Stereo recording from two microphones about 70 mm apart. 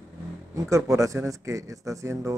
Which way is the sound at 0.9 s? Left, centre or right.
Right.